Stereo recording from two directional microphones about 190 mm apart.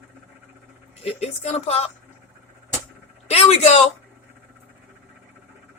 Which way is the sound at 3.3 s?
35° left (ahead or behind).